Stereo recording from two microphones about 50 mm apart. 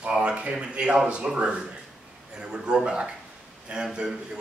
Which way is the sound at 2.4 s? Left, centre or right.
Centre.